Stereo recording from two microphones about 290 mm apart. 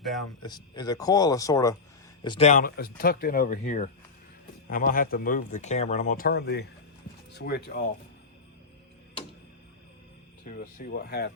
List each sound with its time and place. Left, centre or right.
0.0 s speech: centre
0.4 s speech: centre; by 7.9 s left
10.6 s speech: left